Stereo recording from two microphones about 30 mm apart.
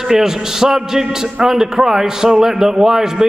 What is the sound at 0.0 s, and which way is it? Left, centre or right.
A man's voice, centre.